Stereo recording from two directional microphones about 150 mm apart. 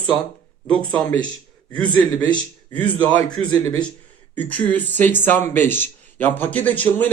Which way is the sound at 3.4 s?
40° right (ahead or behind).